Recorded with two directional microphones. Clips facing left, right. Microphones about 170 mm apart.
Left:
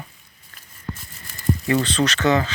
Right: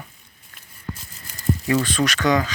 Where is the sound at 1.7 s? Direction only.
25° left (ahead or behind).